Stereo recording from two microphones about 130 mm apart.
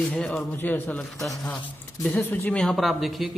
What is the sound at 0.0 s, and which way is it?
Speech, 10° left (ahead or behind).